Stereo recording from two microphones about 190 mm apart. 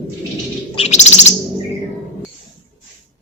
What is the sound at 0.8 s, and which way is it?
Bird, 35° left (ahead or behind).